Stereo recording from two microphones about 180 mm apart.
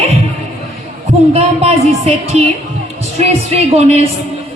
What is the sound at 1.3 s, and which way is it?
A woman's voice, 35° right (ahead or behind).